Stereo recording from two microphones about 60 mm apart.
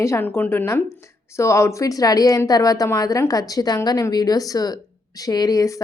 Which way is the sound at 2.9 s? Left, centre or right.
Left.